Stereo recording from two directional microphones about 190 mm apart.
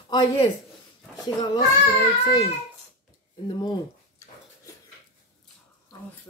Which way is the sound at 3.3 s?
20° left (ahead or behind).